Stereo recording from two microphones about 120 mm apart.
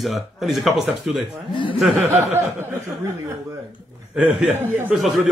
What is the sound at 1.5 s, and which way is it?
Speech, 45° left (ahead or behind).